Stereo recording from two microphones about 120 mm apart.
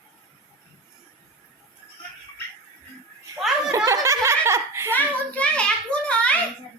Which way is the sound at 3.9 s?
25° right (ahead or behind).